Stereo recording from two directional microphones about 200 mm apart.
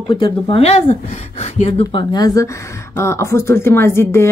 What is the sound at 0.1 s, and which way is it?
Speech, 25° left (ahead or behind).